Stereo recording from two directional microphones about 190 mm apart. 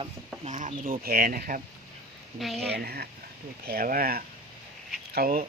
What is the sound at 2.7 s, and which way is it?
Speech, 55° right (ahead or behind).